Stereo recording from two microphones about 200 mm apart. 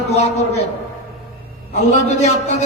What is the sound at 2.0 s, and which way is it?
Speech, 35° left (ahead or behind).